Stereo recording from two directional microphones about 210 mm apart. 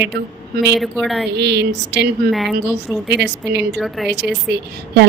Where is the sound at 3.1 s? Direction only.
55° right (ahead or behind).